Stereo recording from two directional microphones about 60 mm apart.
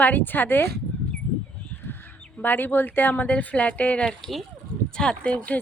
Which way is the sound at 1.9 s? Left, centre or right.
Left.